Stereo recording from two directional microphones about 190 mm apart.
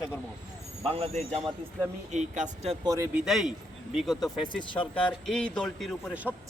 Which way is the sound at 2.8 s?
15° right (ahead or behind).